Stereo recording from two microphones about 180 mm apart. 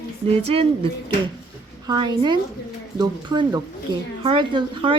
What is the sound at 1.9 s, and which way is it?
Speech, 25° right (ahead or behind).